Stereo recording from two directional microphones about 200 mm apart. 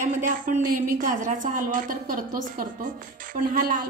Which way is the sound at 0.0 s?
40° right (ahead or behind).